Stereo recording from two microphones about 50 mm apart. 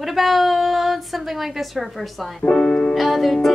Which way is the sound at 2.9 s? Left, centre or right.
Centre.